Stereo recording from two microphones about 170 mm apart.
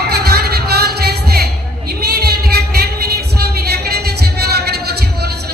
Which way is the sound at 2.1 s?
70° right (ahead or behind).